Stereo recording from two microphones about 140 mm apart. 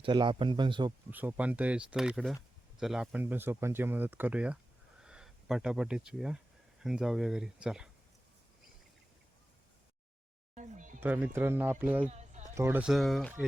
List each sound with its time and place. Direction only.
0.0 s speech: 35° right (ahead or behind)
1.1 s speech: 10° right (ahead or behind)
10.5 s a sound: 65° right (ahead or behind)
11.0 s speech: 15° right (ahead or behind)
12.0 s a sound: 55° right (ahead or behind)
12.5 s speech: 20° right (ahead or behind)
12.8 s speech: centre (ahead or behind)